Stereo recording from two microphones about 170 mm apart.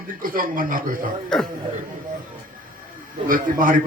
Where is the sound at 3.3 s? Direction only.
55° right (ahead or behind).